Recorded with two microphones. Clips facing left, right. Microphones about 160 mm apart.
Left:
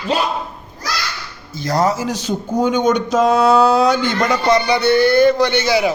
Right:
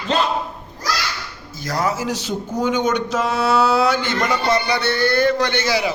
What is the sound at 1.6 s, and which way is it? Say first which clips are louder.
Speech: left 5 dB; 35° left (ahead or behind).